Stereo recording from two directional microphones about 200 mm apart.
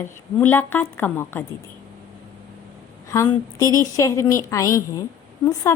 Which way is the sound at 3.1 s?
15° left (ahead or behind).